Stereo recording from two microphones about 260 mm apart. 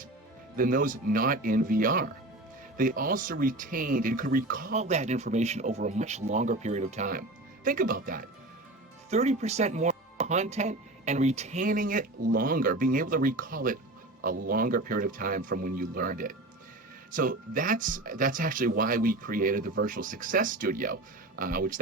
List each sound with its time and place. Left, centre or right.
0.5 s speech: right